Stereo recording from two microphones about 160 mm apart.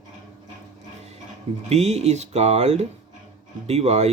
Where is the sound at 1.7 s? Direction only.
40° right (ahead or behind).